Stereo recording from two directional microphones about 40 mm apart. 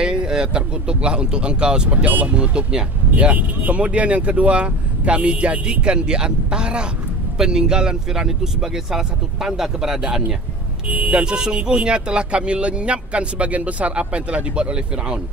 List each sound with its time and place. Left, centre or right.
0.0 s speech: centre
2.0 s speech: right
2.3 s speech: right
10.9 s speech: right
11.2 s speech: right